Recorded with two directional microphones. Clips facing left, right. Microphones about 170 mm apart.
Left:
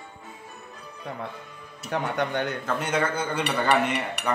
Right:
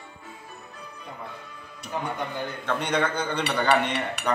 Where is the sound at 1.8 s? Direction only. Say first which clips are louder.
Left 4 dB; 75° left (ahead or behind).